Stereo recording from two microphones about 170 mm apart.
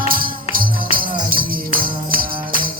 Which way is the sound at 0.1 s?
55° right (ahead or behind).